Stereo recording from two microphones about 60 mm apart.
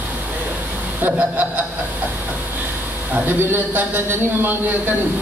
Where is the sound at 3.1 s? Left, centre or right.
Right.